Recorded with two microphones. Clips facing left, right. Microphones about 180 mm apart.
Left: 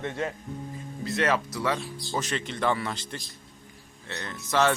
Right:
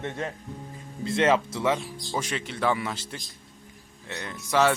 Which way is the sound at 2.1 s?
10° right (ahead or behind).